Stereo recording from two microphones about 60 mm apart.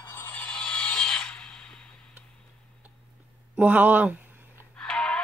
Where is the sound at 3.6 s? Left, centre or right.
Right.